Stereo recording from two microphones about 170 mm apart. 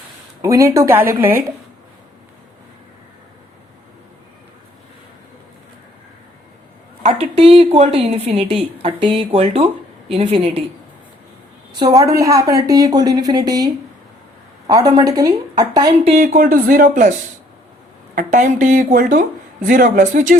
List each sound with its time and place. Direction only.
0.4 s speech: 20° right (ahead or behind)
7.0 s a woman's voice: 35° right (ahead or behind)
11.7 s speech: 25° right (ahead or behind)
14.7 s speech: 20° right (ahead or behind)
16.1 s a woman's voice: 55° right (ahead or behind)